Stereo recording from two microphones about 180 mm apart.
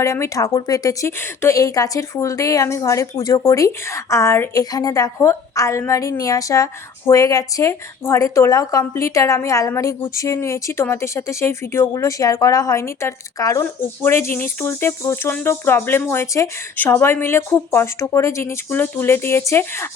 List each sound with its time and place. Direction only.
0.0 s speech: 15° left (ahead or behind)